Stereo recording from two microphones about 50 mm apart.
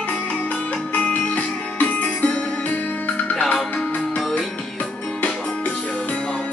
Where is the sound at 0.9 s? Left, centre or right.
Left.